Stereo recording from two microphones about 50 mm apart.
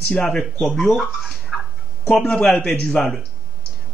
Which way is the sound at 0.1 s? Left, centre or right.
Centre.